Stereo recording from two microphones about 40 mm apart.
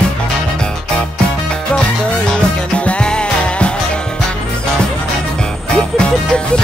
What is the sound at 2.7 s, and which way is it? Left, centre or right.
Music, left.